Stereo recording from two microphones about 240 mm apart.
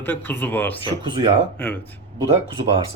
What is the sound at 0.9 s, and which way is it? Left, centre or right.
Speech, centre.